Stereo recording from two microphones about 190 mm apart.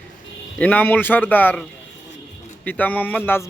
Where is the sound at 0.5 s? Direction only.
10° left (ahead or behind).